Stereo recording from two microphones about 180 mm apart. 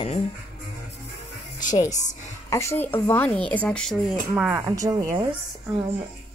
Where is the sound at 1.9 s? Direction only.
40° left (ahead or behind).